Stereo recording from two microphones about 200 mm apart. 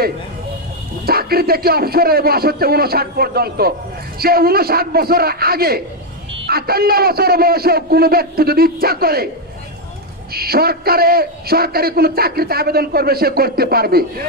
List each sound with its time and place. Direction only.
1.0 s a man's voice: 50° right (ahead or behind)
10.3 s a man's voice: 50° right (ahead or behind)